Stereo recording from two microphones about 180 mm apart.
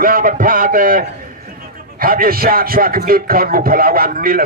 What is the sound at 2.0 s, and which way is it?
Speech, 55° right (ahead or behind).